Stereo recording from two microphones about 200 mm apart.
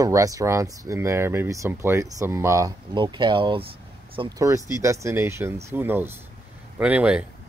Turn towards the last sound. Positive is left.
turn(degrees=-5)  # may be behind; listen again after turning